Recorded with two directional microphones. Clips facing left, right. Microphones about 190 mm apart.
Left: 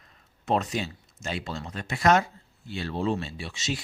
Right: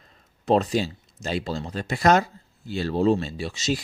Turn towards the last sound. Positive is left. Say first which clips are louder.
# right 6 dB
turn(degrees=-40)  # may be behind; listen again after turning